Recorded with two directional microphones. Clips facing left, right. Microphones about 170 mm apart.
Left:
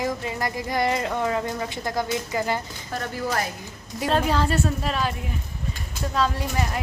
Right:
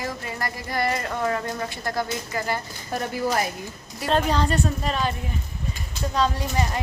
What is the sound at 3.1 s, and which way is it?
Speech, 15° right (ahead or behind).